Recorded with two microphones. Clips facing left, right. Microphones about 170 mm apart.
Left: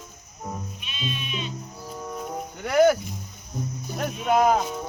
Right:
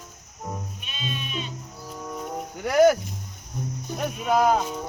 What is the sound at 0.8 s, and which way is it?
Music, 45° right (ahead or behind).